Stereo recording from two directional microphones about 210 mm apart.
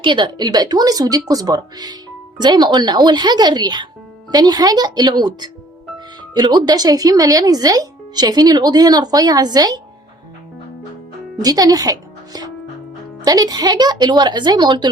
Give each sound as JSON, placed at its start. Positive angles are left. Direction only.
{"t": 0.0, "sound": "speech", "side_deg": -20}
{"t": 11.4, "sound": "speech", "side_deg": -15}